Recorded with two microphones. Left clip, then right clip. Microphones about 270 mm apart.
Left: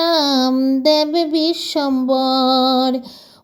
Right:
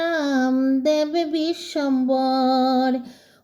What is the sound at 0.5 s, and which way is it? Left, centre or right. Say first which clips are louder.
Music: left 4 dB; left.